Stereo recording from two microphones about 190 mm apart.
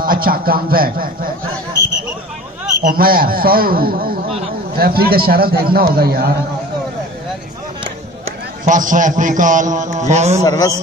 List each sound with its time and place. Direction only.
0.0 s a man's voice: 50° right (ahead or behind)
2.8 s a man's voice: 50° right (ahead or behind)
8.6 s a man's voice: 45° right (ahead or behind)
10.4 s a man's voice: 20° left (ahead or behind)